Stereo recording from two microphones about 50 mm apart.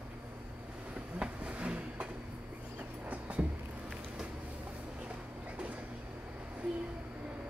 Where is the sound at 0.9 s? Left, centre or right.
Right.